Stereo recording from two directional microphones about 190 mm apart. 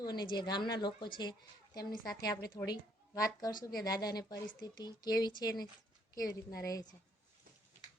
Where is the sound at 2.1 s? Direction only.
20° left (ahead or behind).